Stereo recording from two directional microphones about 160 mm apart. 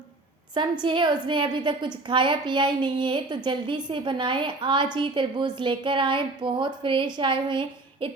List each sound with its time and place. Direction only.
0.5 s a woman's voice: 30° right (ahead or behind)